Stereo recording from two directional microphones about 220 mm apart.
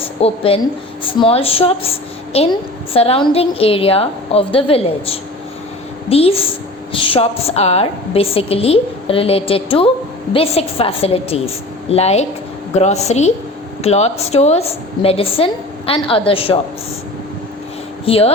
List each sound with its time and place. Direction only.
0.2 s a woman's voice: 25° left (ahead or behind)
18.0 s speech: 25° left (ahead or behind)